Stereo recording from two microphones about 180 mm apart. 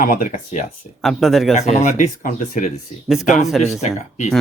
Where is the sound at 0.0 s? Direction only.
50° left (ahead or behind).